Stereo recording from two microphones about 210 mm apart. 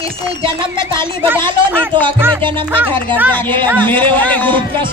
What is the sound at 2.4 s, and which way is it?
Speech, 25° right (ahead or behind).